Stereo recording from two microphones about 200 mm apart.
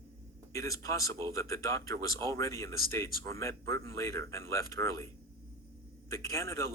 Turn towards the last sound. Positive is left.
turn(degrees=15)  # may be behind; listen again after turning